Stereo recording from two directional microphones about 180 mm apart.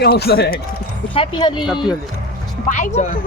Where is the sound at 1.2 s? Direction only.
25° left (ahead or behind).